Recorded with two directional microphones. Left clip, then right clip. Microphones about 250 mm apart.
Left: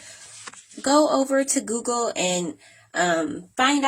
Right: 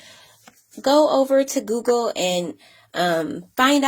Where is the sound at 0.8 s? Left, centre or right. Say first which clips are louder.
Right 3 dB; centre.